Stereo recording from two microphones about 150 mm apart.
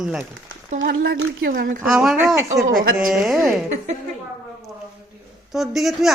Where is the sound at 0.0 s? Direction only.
5° right (ahead or behind).